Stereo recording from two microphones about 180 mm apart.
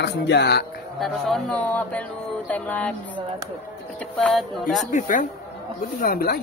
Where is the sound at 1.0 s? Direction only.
Centre (ahead or behind).